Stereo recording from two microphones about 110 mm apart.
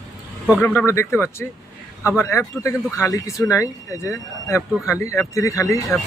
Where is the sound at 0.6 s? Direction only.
25° left (ahead or behind).